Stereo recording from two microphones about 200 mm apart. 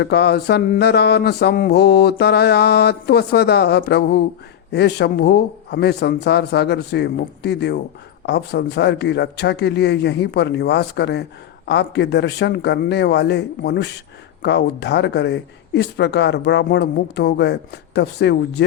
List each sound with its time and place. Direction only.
0.0 s a man's voice: 60° left (ahead or behind)